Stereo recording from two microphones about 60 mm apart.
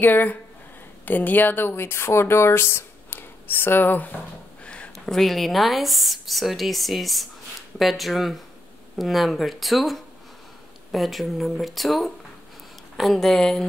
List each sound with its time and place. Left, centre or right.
0.0 s speech: left
4.9 s speech: centre